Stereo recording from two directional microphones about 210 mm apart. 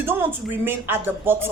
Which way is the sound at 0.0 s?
10° right (ahead or behind).